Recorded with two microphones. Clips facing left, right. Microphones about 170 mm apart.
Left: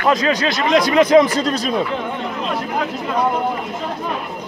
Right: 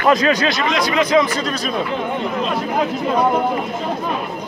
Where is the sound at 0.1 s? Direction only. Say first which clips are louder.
Right 2 dB; 30° left (ahead or behind); by 1.2 s 50° left (ahead or behind).